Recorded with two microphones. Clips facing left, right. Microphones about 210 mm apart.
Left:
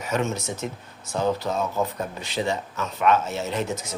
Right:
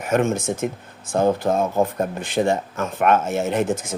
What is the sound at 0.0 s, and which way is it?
Speech, 50° right (ahead or behind).